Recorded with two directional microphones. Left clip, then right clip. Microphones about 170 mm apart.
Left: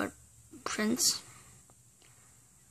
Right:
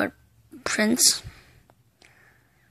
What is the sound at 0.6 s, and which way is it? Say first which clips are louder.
Speech: right 9 dB; 25° right (ahead or behind).